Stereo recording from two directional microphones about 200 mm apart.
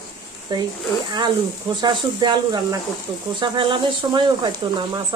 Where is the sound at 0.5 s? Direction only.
20° right (ahead or behind).